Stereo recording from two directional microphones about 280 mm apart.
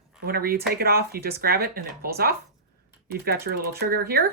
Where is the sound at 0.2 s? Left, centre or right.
Right.